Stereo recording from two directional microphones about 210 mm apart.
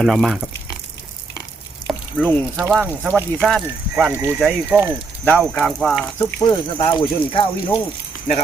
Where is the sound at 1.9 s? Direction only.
Centre (ahead or behind).